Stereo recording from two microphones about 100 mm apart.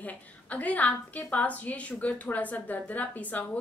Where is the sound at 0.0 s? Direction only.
15° left (ahead or behind).